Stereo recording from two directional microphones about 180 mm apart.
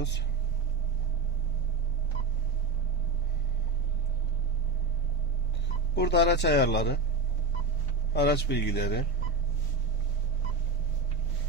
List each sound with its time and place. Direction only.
5.9 s a man's voice: 70° left (ahead or behind)
8.1 s a man's voice: 70° left (ahead or behind)